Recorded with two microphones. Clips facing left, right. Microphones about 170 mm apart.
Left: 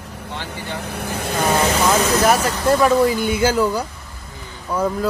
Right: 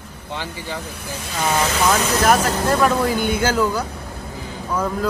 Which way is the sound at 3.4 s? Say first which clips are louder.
Left 2 dB; 10° left (ahead or behind).